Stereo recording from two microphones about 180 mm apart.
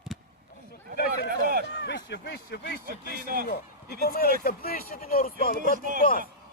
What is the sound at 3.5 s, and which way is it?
Speech, 60° left (ahead or behind).